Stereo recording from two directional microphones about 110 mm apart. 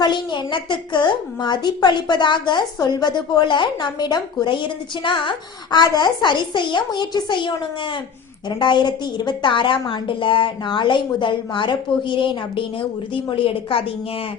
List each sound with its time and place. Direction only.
0.0 s a woman's voice: 45° left (ahead or behind)